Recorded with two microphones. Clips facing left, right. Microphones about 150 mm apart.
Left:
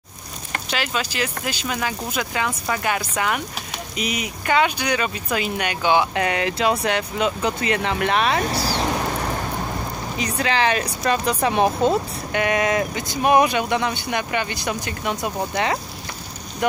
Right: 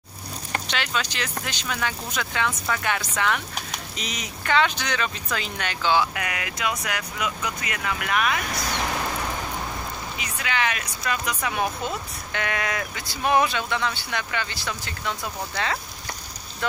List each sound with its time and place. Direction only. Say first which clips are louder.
0.7 s speech: left 5 dB; 5° left (ahead or behind)
6.1 s speech: left 9 dB; 30° left (ahead or behind)
10.1 s speech: left 7 dB; 35° left (ahead or behind); by 15.8 s 20° left (ahead or behind)